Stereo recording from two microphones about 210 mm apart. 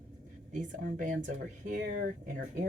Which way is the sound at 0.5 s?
40° right (ahead or behind).